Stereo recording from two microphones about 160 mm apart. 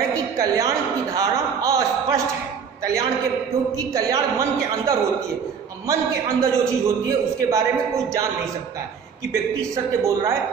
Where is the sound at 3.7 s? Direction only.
20° right (ahead or behind).